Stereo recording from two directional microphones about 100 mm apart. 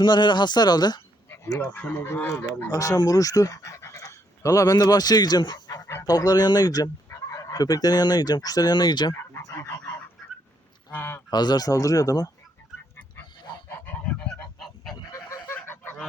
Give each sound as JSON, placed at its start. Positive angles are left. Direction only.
{"t": 0.0, "sound": "speech", "side_deg": 50}
{"t": 1.5, "sound": "speech", "side_deg": 15}
{"t": 2.6, "sound": "speech", "side_deg": 35}
{"t": 9.3, "sound": "fowl", "side_deg": 25}
{"t": 10.9, "sound": "speech", "side_deg": 20}
{"t": 11.3, "sound": "speech", "side_deg": 45}
{"t": 13.7, "sound": "goose", "side_deg": 15}
{"t": 15.1, "sound": "fowl", "side_deg": 25}